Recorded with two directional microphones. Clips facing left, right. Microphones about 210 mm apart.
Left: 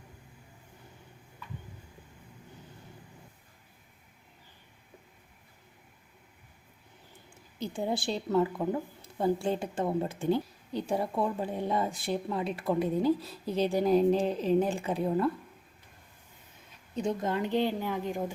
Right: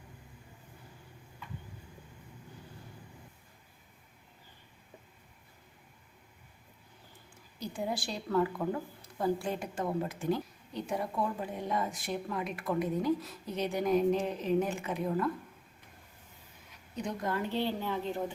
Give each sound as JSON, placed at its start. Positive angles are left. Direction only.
{"t": 7.6, "sound": "a woman's voice", "side_deg": 25}
{"t": 16.9, "sound": "a woman's voice", "side_deg": 25}